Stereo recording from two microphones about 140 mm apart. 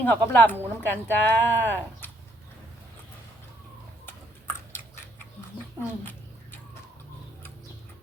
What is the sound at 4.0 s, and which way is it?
Chewing, 15° left (ahead or behind).